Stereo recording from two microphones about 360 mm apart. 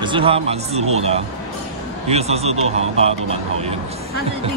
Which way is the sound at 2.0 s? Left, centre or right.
Centre.